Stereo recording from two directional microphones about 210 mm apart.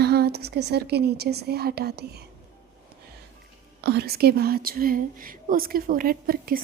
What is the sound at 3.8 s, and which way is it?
A woman's voice, 50° right (ahead or behind).